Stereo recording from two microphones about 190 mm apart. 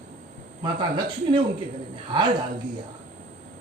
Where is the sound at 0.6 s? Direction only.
25° right (ahead or behind).